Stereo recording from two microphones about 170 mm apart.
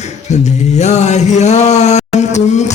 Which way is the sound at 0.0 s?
40° left (ahead or behind).